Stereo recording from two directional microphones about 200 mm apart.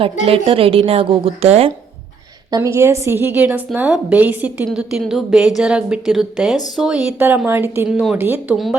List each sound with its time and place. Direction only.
0.3 s a woman's voice: 25° right (ahead or behind)
2.5 s a woman's voice: 15° right (ahead or behind)